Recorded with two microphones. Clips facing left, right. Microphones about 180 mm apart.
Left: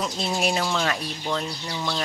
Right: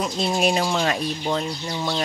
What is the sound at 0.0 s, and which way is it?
Speech, 20° right (ahead or behind).